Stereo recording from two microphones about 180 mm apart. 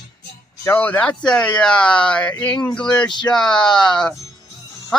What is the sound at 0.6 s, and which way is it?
Speech, 10° left (ahead or behind).